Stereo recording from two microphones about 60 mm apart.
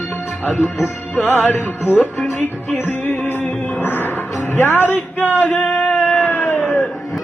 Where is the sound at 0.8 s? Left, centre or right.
Left.